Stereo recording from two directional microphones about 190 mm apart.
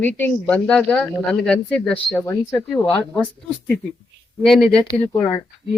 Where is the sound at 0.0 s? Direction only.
10° left (ahead or behind).